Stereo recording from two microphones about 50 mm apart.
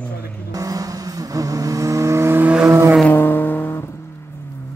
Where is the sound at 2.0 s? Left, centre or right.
Right.